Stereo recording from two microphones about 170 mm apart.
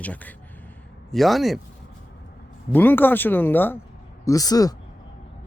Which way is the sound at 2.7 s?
10° left (ahead or behind).